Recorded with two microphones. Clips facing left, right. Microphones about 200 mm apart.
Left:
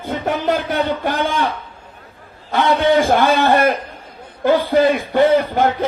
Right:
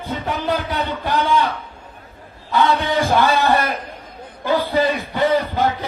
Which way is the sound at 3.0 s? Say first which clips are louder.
Left 2 dB; 55° left (ahead or behind).